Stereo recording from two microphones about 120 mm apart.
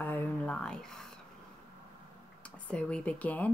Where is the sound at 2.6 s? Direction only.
10° left (ahead or behind).